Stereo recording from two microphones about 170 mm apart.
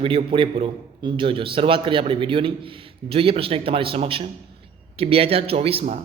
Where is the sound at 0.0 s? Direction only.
30° right (ahead or behind).